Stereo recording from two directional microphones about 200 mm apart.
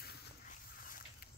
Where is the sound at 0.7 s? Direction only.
45° left (ahead or behind).